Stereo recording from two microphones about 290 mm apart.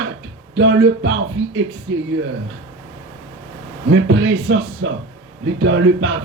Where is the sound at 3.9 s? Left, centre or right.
Right.